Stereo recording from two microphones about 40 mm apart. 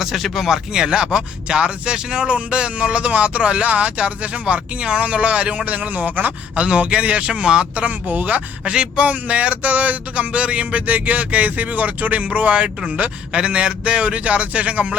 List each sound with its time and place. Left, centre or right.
0.0 s speech: centre; by 5.6 s right
5.6 s speech: right
6.6 s speech: right
7.8 s speech: right
8.7 s speech: right
9.0 s speech: right
10.3 s speech: right